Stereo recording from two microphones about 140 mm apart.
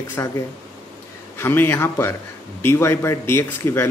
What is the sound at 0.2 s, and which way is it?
Speech, 20° left (ahead or behind).